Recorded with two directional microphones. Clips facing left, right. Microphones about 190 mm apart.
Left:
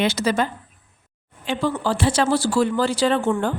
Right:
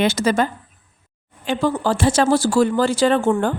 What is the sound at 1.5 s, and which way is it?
Speech, 45° right (ahead or behind).